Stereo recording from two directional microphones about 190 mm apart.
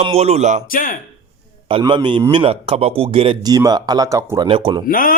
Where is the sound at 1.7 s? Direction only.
25° right (ahead or behind).